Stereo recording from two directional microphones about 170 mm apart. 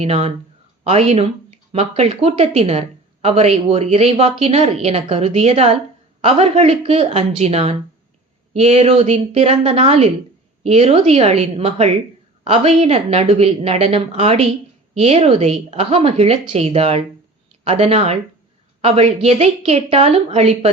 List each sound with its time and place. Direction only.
0.0 s speech: 35° right (ahead or behind)